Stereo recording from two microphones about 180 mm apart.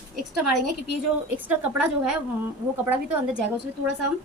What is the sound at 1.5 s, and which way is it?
Speech, 10° right (ahead or behind).